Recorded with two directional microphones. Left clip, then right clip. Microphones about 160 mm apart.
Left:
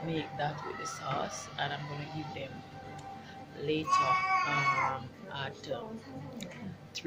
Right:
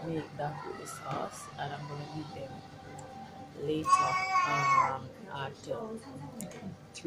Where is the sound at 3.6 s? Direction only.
10° right (ahead or behind).